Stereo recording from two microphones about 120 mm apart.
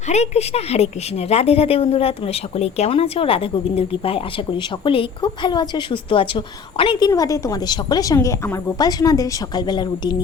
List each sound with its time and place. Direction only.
0.1 s a woman's voice: 65° left (ahead or behind); by 7.1 s 45° left (ahead or behind)
7.1 s a woman's voice: 25° left (ahead or behind)